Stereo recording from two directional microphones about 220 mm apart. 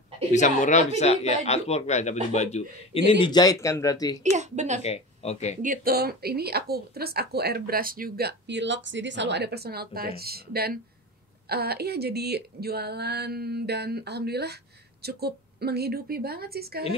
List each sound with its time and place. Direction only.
0.3 s speech: 35° left (ahead or behind); by 4.2 s 15° left (ahead or behind)
4.2 s speech: 30° right (ahead or behind)
4.8 s speech: 30° left (ahead or behind)
5.6 s a woman's voice: 40° right (ahead or behind)